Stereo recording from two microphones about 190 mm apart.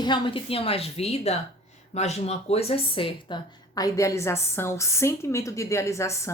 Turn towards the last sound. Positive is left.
turn(degrees=15)  # may be behind; listen again after turning